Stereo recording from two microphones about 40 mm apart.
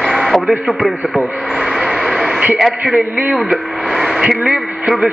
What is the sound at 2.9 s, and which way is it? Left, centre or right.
Speech, right.